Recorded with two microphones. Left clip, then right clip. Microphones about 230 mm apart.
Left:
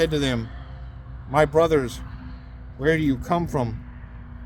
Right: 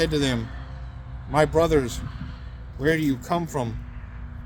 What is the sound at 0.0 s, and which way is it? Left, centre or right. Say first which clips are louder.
Speech: left 1 dB; left.